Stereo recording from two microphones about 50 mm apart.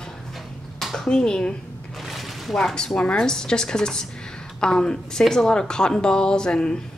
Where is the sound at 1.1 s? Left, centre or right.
Centre.